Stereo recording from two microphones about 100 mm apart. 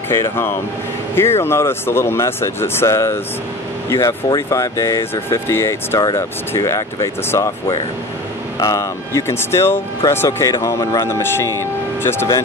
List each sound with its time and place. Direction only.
0.1 s speech: 25° left (ahead or behind)
4.4 s speech: 30° left (ahead or behind)
5.9 s speech: 40° left (ahead or behind)